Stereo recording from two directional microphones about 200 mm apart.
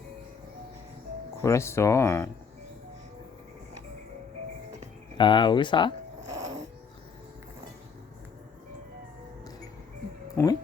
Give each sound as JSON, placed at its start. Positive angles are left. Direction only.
{"t": 1.4, "sound": "speech", "side_deg": 15}
{"t": 5.1, "sound": "speech", "side_deg": 25}
{"t": 10.3, "sound": "music", "side_deg": 20}